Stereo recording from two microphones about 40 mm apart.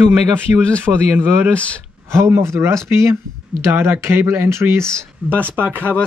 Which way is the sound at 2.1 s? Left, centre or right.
Right.